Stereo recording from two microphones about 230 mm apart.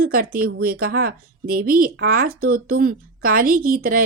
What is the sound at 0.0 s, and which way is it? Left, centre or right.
Speech, right.